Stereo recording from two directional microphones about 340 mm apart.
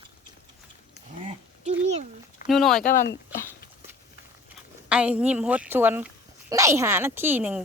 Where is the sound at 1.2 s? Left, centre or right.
Centre.